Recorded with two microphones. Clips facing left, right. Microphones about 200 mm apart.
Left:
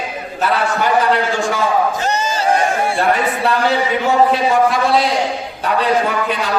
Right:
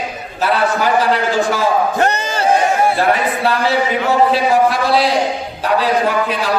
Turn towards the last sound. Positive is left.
turn(degrees=0)  # may be behind; listen again after turning